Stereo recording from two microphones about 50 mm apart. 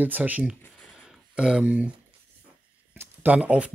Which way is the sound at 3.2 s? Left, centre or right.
Right.